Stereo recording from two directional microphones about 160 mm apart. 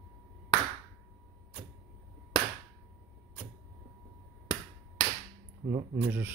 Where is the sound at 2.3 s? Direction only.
30° left (ahead or behind).